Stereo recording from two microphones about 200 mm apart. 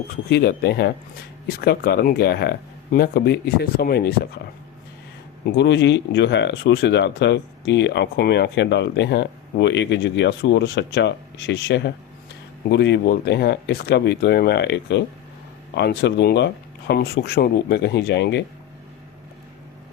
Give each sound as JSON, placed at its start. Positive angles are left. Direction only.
{"t": 0.3, "sound": "speech", "side_deg": 55}
{"t": 5.5, "sound": "speech", "side_deg": 60}